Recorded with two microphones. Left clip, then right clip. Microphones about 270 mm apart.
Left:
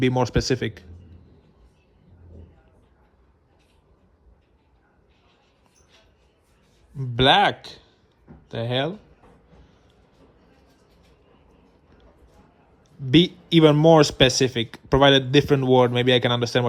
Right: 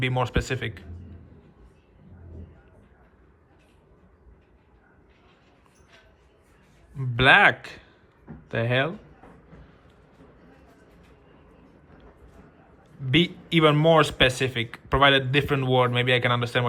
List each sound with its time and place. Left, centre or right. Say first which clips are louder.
0.0 s speech: left 4 dB; centre
6.9 s speech: even; centre
13.1 s speech: left 4 dB; centre